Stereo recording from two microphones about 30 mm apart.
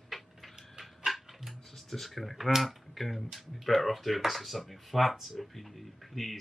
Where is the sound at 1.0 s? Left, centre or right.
Centre.